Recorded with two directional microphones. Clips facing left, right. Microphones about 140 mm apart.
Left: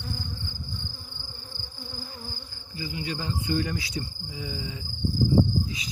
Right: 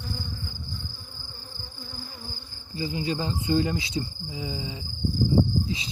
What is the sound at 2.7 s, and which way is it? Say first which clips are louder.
Insect: right 5 dB; 30° right (ahead or behind).